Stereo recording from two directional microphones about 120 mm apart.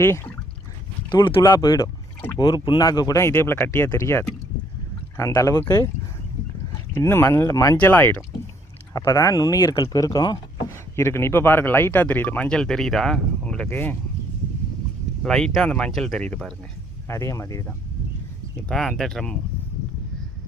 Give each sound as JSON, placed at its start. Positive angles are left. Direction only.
{"t": 0.0, "sound": "speech", "side_deg": 20}
{"t": 1.1, "sound": "speech", "side_deg": 40}
{"t": 6.9, "sound": "speech", "side_deg": 20}
{"t": 7.8, "sound": "speech", "side_deg": 15}
{"t": 8.9, "sound": "speech", "side_deg": 25}
{"t": 10.9, "sound": "speech", "side_deg": 20}
{"t": 13.7, "sound": "speech", "side_deg": 15}
{"t": 15.2, "sound": "speech", "side_deg": 5}
{"t": 17.1, "sound": "speech", "side_deg": 25}
{"t": 18.7, "sound": "speech", "side_deg": 5}